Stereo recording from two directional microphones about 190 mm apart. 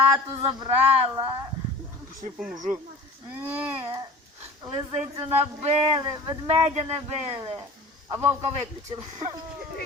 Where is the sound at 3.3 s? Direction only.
10° right (ahead or behind).